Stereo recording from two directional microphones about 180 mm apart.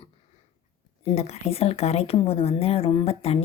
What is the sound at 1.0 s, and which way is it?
A woman's voice, 35° left (ahead or behind).